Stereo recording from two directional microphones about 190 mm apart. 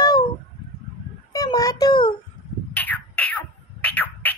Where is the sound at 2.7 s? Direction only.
10° left (ahead or behind).